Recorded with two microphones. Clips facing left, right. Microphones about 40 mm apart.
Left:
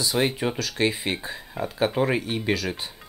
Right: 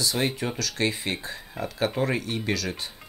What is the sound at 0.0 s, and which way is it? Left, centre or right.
Speech, centre.